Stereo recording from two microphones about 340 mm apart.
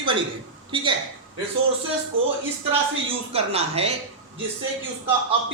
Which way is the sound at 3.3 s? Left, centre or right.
Centre.